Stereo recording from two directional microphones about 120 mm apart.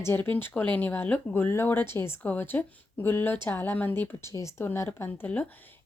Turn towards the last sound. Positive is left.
turn(degrees=15)  # may be behind; listen again after turning